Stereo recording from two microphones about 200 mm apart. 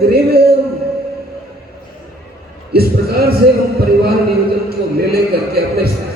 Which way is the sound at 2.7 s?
50° right (ahead or behind).